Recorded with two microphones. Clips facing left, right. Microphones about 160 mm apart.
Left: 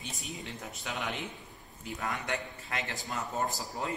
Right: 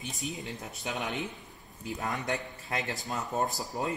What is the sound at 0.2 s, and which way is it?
Speech, 20° right (ahead or behind).